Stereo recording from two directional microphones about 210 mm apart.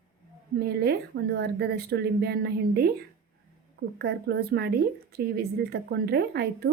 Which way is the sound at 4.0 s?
50° right (ahead or behind).